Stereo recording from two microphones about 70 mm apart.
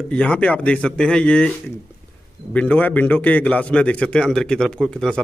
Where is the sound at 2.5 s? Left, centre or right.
Left.